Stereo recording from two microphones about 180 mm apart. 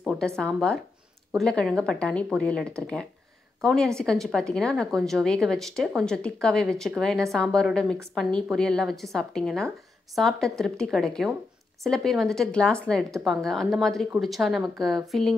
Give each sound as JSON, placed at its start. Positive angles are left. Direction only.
{"t": 0.0, "sound": "a woman's voice", "side_deg": 0}